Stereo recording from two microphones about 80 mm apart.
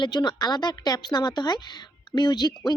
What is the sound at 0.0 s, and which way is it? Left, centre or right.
Speech, left.